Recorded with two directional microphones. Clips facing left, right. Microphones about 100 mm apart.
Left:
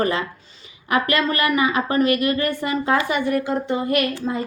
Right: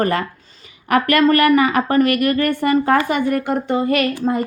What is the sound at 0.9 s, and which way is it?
A woman's voice, 60° right (ahead or behind).